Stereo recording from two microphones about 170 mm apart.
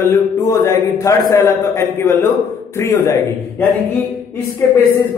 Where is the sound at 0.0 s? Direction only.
15° left (ahead or behind).